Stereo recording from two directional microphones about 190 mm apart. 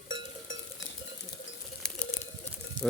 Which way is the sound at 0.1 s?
90° left.